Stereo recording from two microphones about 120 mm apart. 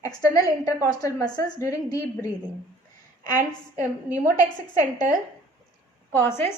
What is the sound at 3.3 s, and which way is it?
A woman's voice, 15° right (ahead or behind).